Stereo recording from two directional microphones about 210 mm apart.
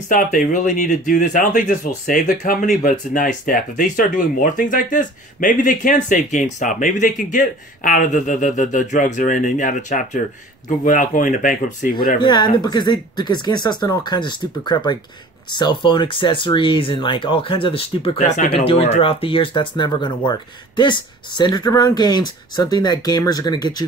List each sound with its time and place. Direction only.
0.1 s speech: 40° left (ahead or behind)
12.2 s speech: 20° left (ahead or behind)